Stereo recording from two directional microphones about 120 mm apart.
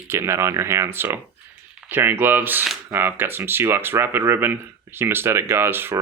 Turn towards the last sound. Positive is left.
turn(degrees=-20)  # may be behind; listen again after turning